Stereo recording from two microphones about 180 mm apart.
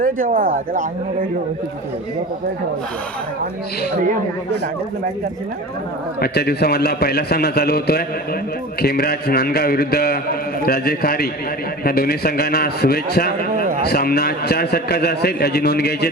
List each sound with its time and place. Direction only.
0.0 s speech: 50° right (ahead or behind)
3.9 s speech: 50° right (ahead or behind)
6.1 s a man's voice: 60° left (ahead or behind)